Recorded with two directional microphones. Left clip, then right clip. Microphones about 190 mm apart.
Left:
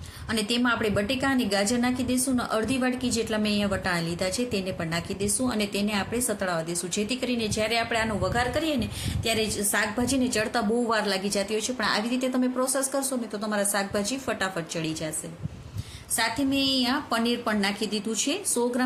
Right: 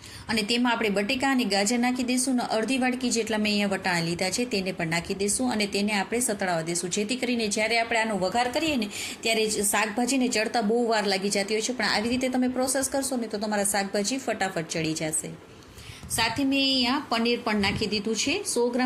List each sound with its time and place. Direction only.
0.3 s a woman's voice: 10° right (ahead or behind)
16.1 s a woman's voice: 10° right (ahead or behind)